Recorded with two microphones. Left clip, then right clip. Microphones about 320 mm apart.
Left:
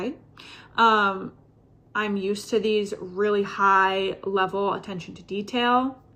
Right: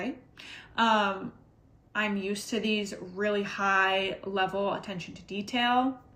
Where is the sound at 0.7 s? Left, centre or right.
Right.